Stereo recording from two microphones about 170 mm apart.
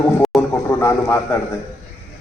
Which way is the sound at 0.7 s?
15° left (ahead or behind).